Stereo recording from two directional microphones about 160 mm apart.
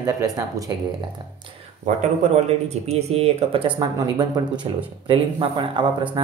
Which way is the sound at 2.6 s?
40° right (ahead or behind).